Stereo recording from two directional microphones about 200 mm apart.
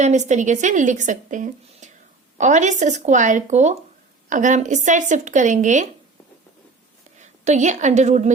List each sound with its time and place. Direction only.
0.0 s speech: 35° right (ahead or behind)
7.2 s a woman's voice: 35° right (ahead or behind)